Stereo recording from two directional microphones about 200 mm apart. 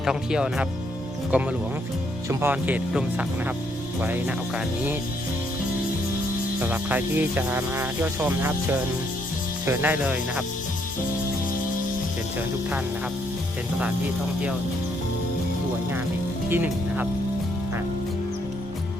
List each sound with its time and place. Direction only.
0.0 s speech: 5° right (ahead or behind)
6.6 s speech: 10° right (ahead or behind)
16.5 s speech: 10° right (ahead or behind)